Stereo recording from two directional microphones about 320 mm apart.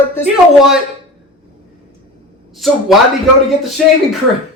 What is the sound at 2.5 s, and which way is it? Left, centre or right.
Speech, centre.